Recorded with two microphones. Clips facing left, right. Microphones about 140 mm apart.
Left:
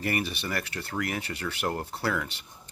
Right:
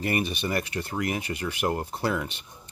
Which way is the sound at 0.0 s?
20° right (ahead or behind).